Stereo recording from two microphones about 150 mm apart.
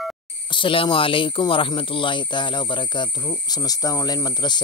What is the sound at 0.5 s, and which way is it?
Speech, 35° left (ahead or behind).